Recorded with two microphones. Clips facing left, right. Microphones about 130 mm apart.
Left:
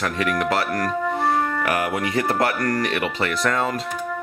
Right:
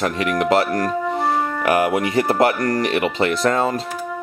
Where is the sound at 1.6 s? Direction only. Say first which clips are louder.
Right 5 dB; 20° right (ahead or behind).